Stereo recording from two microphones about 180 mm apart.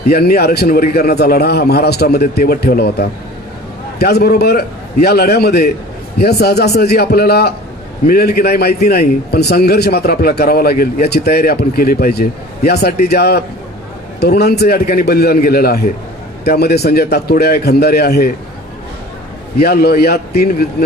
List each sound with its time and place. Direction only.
0.1 s a man's voice: 60° left (ahead or behind)
19.5 s a man's voice: 60° left (ahead or behind)